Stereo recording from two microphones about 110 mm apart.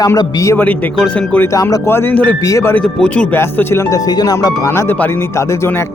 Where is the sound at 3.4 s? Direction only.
20° left (ahead or behind).